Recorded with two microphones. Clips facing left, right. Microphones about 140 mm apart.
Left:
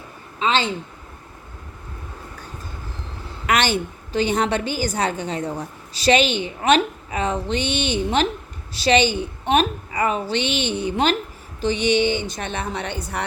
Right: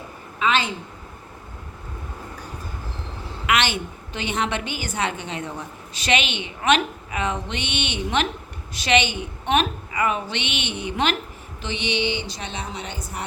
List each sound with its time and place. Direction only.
0.3 s a woman's voice: 30° left (ahead or behind)
3.4 s a woman's voice: 40° left (ahead or behind); by 13.2 s 65° left (ahead or behind)